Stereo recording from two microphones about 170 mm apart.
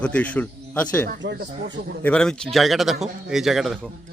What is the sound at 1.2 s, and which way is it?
Speech, 90° right.